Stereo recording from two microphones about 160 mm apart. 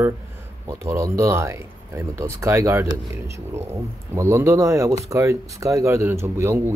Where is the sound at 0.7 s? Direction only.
15° right (ahead or behind).